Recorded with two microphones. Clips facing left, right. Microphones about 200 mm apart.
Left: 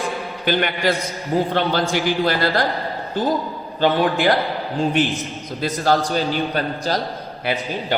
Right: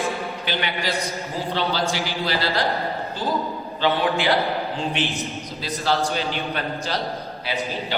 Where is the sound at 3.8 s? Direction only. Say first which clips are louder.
Left 4 dB; 45° left (ahead or behind).